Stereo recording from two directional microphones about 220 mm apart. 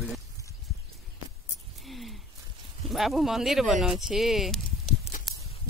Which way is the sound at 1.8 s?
Centre (ahead or behind).